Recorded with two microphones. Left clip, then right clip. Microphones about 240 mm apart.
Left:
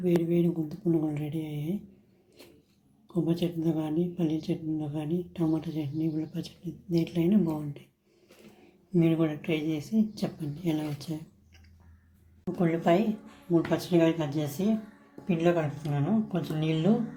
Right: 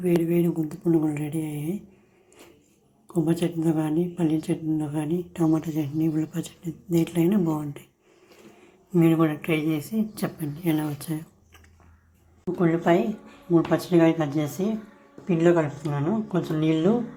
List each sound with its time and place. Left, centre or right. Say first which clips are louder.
0.0 s speech: right 4 dB; centre
3.2 s speech: right 5 dB; centre
9.0 s speech: right 5 dB; centre
12.5 s speech: right 4 dB; centre